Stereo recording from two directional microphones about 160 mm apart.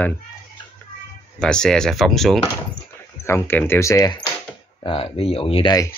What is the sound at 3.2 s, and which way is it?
Speech, 15° left (ahead or behind).